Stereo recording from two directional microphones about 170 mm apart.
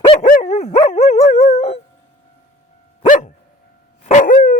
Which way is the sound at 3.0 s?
50° left (ahead or behind).